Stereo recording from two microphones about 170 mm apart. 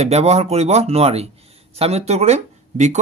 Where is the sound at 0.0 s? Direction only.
40° right (ahead or behind).